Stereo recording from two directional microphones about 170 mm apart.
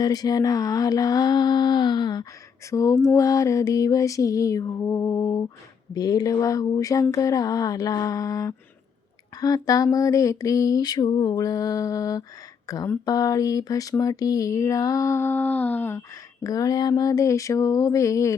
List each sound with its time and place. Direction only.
0.0 s speech: 20° left (ahead or behind)